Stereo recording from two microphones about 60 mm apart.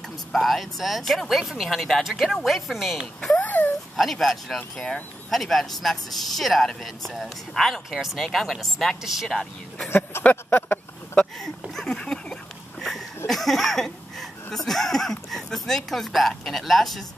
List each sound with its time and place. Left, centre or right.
0.3 s speech: centre
3.3 s a sound: left
3.9 s speech: centre
5.3 s speech: centre
9.8 s speech: left
11.3 s a sound: centre
13.3 s speech: centre